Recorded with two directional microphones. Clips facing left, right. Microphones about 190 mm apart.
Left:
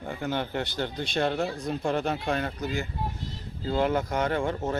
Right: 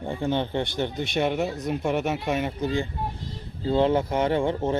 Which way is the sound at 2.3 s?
20° right (ahead or behind).